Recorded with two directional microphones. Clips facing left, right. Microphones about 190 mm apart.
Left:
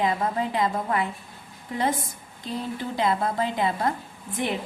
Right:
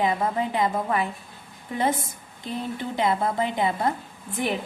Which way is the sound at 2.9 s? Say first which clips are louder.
Right 1 dB; 25° right (ahead or behind).